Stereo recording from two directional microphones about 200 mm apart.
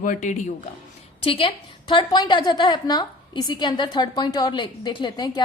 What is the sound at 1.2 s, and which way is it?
A woman's voice, 25° left (ahead or behind).